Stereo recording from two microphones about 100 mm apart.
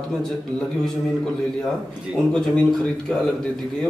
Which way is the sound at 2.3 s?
10° left (ahead or behind).